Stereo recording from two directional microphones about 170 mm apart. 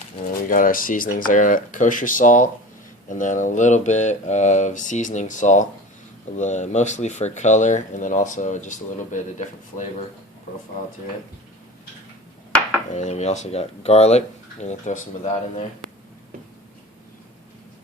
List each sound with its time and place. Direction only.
0.4 s mantra: 55° left (ahead or behind)
12.9 s speech: 40° left (ahead or behind)